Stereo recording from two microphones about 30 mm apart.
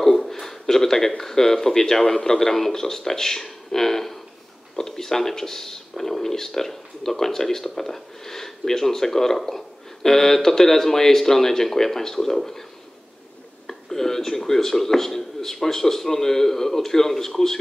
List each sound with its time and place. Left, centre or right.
0.3 s speech: centre
13.7 s speech: centre